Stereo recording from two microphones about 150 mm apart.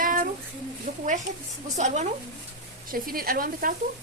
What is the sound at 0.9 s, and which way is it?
Speech, 90° right.